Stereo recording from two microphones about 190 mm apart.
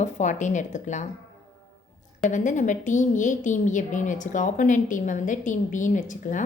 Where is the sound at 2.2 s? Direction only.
40° left (ahead or behind).